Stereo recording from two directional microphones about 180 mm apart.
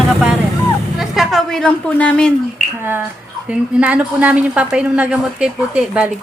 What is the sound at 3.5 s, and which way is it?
A woman's voice, 5° right (ahead or behind).